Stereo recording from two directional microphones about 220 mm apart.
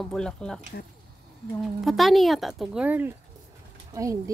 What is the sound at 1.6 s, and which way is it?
Speech, centre (ahead or behind).